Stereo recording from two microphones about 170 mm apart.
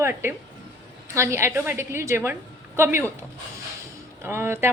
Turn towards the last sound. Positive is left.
turn(degrees=-15)  # may be behind; listen again after turning